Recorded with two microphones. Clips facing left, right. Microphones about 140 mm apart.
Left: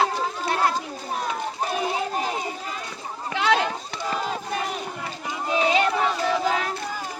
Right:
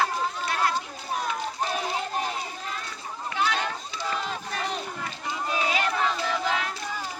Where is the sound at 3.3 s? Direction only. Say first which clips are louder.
Left 2 dB; 90° left.